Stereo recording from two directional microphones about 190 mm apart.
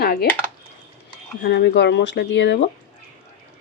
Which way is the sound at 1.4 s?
60° left (ahead or behind).